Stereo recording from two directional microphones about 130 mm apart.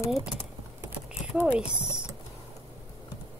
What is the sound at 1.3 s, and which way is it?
Speech, 10° right (ahead or behind).